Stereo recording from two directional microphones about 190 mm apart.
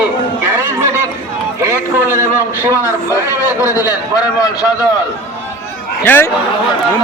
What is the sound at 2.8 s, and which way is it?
A man's voice, 15° left (ahead or behind).